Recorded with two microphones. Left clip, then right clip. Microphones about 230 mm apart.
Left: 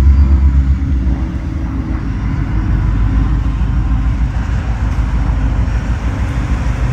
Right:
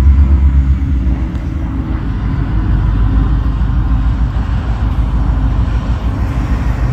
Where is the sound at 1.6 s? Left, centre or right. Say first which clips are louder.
Right 1 dB; centre.